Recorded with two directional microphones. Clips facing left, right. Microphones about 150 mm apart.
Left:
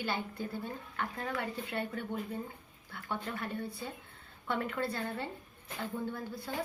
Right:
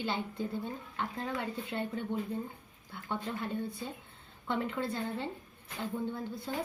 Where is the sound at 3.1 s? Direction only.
20° right (ahead or behind).